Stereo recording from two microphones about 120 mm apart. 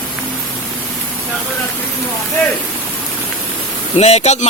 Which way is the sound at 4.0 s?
65° left (ahead or behind).